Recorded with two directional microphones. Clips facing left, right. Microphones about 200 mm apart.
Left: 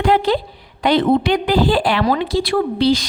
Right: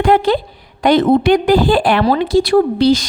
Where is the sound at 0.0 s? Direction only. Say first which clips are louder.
Right 3 dB; 50° right (ahead or behind).